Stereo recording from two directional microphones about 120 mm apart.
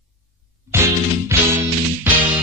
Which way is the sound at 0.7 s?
20° right (ahead or behind).